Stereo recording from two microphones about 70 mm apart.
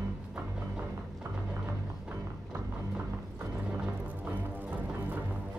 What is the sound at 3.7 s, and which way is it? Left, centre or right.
Music, right.